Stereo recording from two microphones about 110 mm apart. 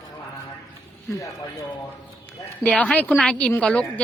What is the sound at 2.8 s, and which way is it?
A woman's voice, 10° left (ahead or behind).